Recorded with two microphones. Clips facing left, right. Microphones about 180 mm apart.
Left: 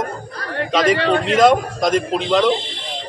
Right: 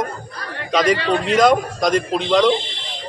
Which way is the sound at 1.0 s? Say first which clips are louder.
Left 2 dB; 60° left (ahead or behind).